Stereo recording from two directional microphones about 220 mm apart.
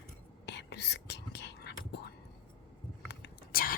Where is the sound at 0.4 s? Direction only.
50° left (ahead or behind).